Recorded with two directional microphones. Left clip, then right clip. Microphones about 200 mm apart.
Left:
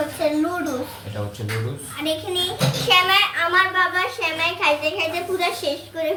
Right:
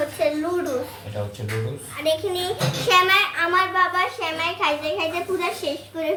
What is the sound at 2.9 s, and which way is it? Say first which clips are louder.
A child's voice: left 1 dB; 10° right (ahead or behind).